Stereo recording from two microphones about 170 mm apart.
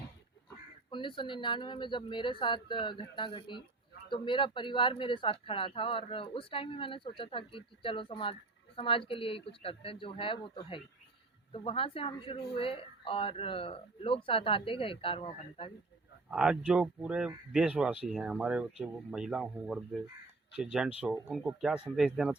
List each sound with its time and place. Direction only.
0.9 s speech: 30° left (ahead or behind)
16.3 s speech: 5° right (ahead or behind)